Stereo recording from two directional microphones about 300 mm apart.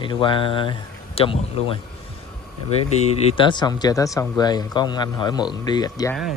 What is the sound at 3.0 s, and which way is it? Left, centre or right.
Speech, centre.